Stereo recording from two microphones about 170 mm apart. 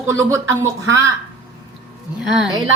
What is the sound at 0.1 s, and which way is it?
Speech, 20° right (ahead or behind).